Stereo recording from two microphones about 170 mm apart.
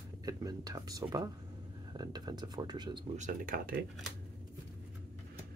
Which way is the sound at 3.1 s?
50° right (ahead or behind).